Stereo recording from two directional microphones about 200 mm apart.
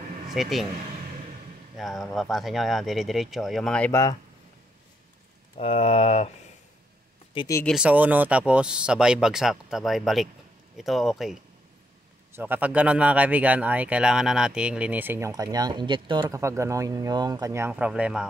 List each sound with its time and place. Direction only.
0.3 s speech: centre (ahead or behind)
1.8 s speech: centre (ahead or behind); by 4.2 s 15° left (ahead or behind)
5.6 s speech: 30° left (ahead or behind)
7.3 s speech: 15° left (ahead or behind)
7.6 s speech: 5° right (ahead or behind)